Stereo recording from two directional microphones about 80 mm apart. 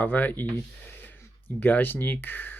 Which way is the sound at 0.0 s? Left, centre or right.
Left.